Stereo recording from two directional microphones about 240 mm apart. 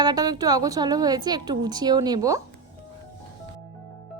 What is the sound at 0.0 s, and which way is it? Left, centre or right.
A woman's voice, centre.